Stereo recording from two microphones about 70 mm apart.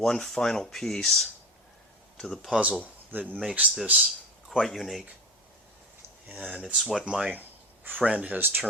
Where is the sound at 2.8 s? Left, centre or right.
Right.